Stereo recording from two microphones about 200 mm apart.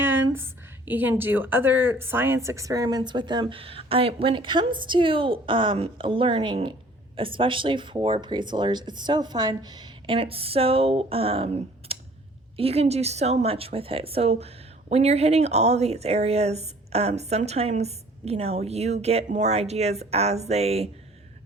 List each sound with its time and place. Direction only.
0.0 s a woman's voice: 10° right (ahead or behind); by 20.9 s 30° right (ahead or behind)